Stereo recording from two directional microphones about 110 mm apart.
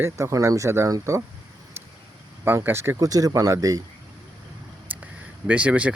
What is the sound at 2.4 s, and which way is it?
Speech, 20° right (ahead or behind).